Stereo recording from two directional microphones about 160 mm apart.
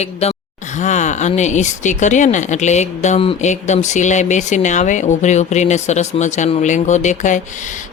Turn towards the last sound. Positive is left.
turn(degrees=50)  # may be behind; listen again after turning